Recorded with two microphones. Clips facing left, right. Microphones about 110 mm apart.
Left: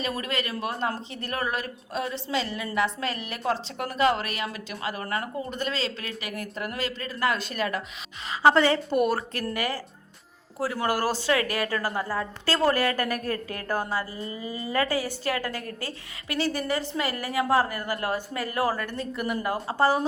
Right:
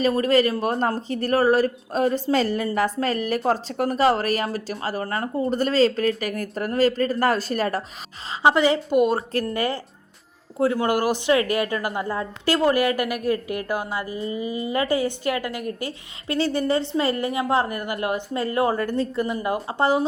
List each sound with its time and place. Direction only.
0.0 s a woman's voice: 35° right (ahead or behind)
8.4 s a woman's voice: 15° right (ahead or behind)
16.3 s a woman's voice: 30° right (ahead or behind)